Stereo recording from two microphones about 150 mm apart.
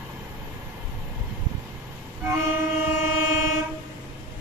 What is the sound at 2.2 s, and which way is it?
Train, 20° right (ahead or behind).